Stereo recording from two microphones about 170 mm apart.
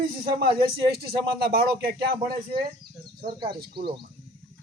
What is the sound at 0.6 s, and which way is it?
A man's voice, 65° right (ahead or behind).